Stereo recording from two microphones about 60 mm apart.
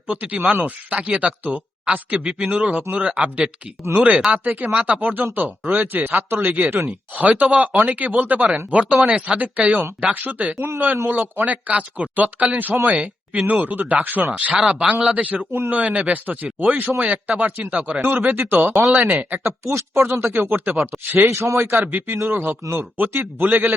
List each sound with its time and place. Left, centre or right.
0.1 s speech: right
8.7 s speech: centre
14.7 s speech: centre; by 19.4 s right
19.4 s speech: right
21.2 s speech: right